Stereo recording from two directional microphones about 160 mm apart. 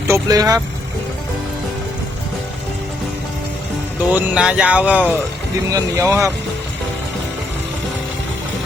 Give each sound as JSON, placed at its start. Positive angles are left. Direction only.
{"t": 0.1, "sound": "speech", "side_deg": -20}
{"t": 4.1, "sound": "speech", "side_deg": -5}
{"t": 5.7, "sound": "speech", "side_deg": -20}